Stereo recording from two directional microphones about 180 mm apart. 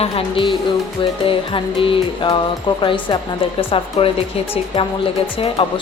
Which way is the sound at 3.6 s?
30° left (ahead or behind).